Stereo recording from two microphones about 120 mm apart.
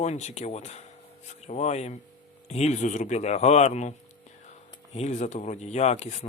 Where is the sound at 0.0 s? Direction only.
70° left (ahead or behind).